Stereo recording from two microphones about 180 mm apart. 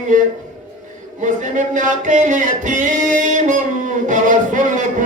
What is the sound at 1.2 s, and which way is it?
Music, 45° right (ahead or behind).